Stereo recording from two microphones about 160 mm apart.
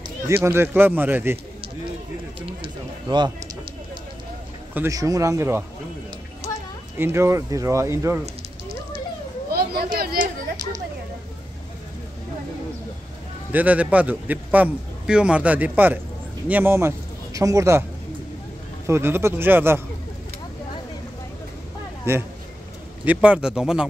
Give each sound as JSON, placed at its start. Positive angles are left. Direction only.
{"t": 0.3, "sound": "a man's voice", "side_deg": -15}
{"t": 2.4, "sound": "speech", "side_deg": -30}
{"t": 4.7, "sound": "speech", "side_deg": -20}
{"t": 7.0, "sound": "a man's voice", "side_deg": -15}
{"t": 9.5, "sound": "a sound", "side_deg": -75}
{"t": 13.5, "sound": "a man's voice", "side_deg": -10}
{"t": 18.9, "sound": "a man's voice", "side_deg": -15}
{"t": 22.1, "sound": "a man's voice", "side_deg": -15}